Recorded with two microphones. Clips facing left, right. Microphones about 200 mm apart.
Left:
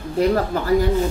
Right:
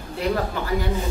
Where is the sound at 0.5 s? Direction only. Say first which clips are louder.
Left 5 dB; 40° left (ahead or behind).